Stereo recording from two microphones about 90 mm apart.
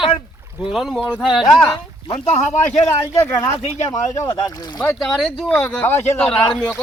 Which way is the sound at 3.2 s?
30° left (ahead or behind).